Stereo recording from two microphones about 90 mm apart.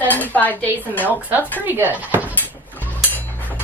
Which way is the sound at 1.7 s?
20° right (ahead or behind).